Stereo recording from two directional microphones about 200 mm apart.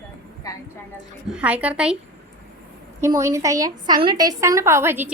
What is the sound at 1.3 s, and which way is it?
Speech, 5° right (ahead or behind).